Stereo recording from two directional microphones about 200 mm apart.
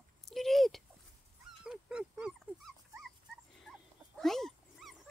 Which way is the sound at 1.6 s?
5° right (ahead or behind).